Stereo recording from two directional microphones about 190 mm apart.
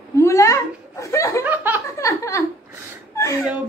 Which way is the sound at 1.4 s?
10° right (ahead or behind).